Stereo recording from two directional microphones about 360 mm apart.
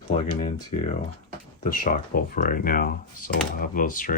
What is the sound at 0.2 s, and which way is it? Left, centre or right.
Speech, centre.